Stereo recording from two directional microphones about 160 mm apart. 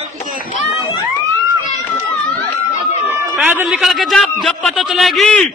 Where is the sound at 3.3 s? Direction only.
5° right (ahead or behind).